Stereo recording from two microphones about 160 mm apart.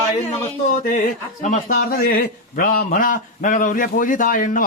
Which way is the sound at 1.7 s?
65° left (ahead or behind).